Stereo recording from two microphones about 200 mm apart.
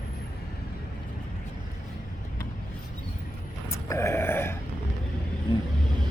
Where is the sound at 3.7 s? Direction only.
15° left (ahead or behind).